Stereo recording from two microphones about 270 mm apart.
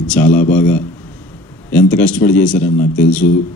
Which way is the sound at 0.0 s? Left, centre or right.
Centre.